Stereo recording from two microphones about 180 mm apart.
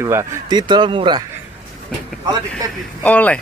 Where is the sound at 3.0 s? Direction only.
10° left (ahead or behind).